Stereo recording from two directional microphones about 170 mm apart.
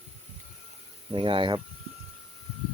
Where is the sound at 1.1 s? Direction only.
30° right (ahead or behind).